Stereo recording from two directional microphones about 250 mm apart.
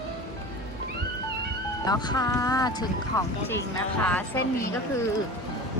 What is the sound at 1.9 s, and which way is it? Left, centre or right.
Speech, centre.